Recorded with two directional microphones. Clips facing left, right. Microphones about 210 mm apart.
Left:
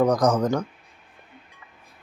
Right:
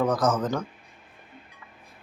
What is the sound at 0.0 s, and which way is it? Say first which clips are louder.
Speech: left 4 dB; 15° left (ahead or behind).